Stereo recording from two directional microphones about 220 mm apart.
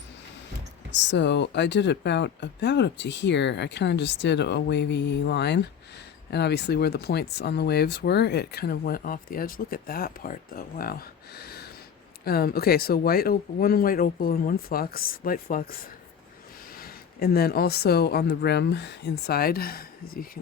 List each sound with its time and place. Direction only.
0.9 s speech: 55° left (ahead or behind)
16.7 s a woman's voice: 45° left (ahead or behind)